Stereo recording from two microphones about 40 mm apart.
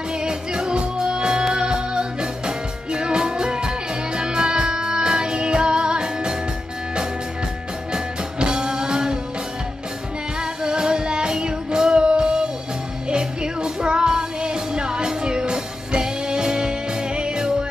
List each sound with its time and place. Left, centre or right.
0.1 s music: right
7.9 s music: right
10.4 s music: centre